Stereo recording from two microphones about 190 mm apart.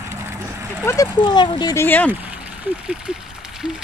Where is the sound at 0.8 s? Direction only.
15° left (ahead or behind).